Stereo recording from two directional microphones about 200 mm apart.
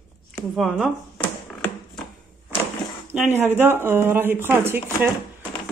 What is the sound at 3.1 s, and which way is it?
Speech, 10° right (ahead or behind).